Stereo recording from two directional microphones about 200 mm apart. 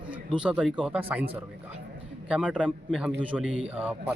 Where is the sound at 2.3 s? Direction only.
5° right (ahead or behind).